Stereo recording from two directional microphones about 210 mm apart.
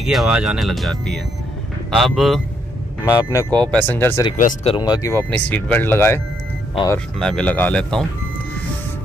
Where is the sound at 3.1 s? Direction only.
15° left (ahead or behind).